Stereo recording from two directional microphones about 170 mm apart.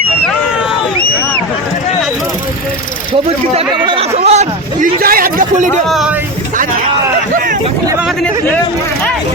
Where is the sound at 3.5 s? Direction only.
35° right (ahead or behind).